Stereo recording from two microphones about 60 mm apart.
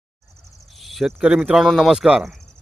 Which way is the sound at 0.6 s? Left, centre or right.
Centre.